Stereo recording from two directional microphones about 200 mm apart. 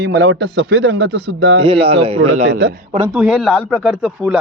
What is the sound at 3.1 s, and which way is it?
Speech, centre (ahead or behind).